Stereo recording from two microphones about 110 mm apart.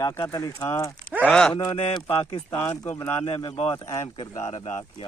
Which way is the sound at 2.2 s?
55° left (ahead or behind).